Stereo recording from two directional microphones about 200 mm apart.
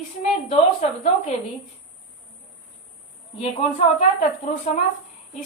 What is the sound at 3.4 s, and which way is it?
Speech, 30° left (ahead or behind).